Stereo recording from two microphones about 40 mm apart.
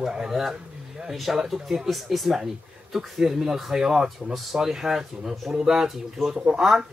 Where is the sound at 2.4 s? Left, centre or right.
Centre.